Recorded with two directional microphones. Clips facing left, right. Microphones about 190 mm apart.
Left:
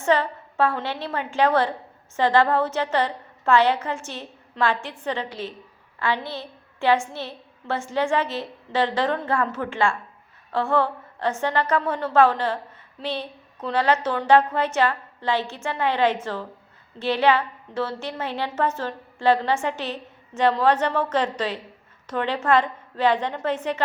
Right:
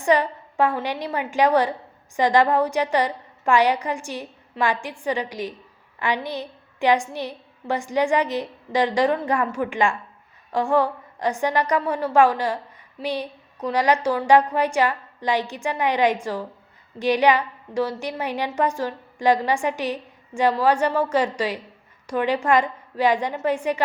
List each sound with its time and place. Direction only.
0.0 s a woman's voice: 15° right (ahead or behind)